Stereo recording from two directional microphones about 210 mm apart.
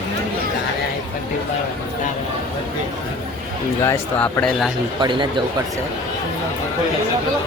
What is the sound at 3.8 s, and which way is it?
Speech, 10° left (ahead or behind).